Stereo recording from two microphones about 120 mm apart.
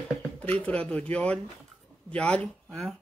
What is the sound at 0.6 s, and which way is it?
Speech, 10° left (ahead or behind).